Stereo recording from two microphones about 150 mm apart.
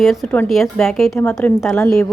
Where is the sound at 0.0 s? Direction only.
Centre (ahead or behind).